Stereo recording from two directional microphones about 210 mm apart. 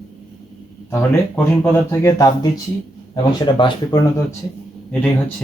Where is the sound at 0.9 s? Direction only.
10° left (ahead or behind).